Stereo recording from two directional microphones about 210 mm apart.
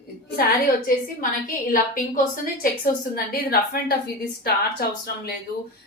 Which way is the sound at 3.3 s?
45° left (ahead or behind).